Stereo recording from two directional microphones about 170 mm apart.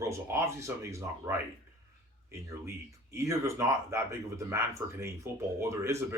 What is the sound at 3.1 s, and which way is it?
Speech, 15° right (ahead or behind).